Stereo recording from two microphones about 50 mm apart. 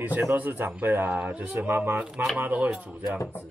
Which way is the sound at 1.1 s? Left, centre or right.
Right.